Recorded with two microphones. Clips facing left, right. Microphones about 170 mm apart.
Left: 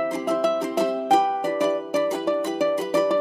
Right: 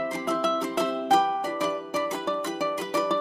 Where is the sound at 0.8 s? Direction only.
15° left (ahead or behind).